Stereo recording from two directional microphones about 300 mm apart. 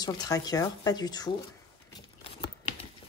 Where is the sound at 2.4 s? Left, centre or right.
Centre.